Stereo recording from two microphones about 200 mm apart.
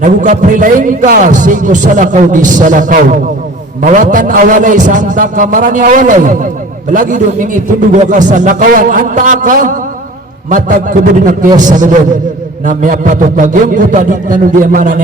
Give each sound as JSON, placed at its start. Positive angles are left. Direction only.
{"t": 0.0, "sound": "a man's voice", "side_deg": -40}